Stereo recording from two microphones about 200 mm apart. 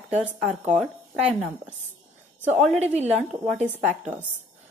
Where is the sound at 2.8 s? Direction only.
35° right (ahead or behind).